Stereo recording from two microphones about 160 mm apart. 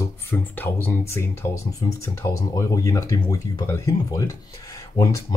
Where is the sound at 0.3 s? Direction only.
10° left (ahead or behind).